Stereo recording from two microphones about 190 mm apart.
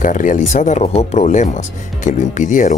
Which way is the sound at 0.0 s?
45° left (ahead or behind).